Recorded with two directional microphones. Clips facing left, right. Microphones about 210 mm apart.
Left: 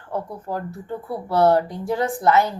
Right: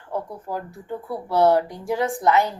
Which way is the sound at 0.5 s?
20° left (ahead or behind).